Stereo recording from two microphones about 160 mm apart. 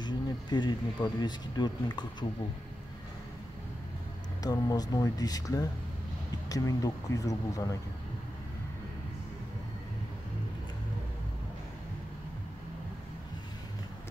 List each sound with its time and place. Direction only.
0.0 s speech: 25° left (ahead or behind)
4.4 s speech: 25° left (ahead or behind)